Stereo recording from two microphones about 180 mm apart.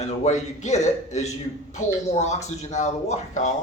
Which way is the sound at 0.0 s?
40° left (ahead or behind).